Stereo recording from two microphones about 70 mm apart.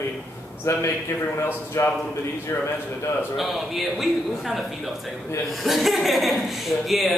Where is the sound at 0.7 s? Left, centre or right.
Left.